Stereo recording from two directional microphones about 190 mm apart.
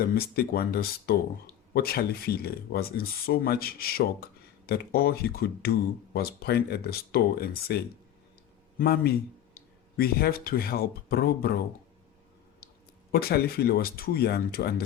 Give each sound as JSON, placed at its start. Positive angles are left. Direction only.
{"t": 0.0, "sound": "speech", "side_deg": 55}
{"t": 8.8, "sound": "speech", "side_deg": 55}
{"t": 13.1, "sound": "speech", "side_deg": 55}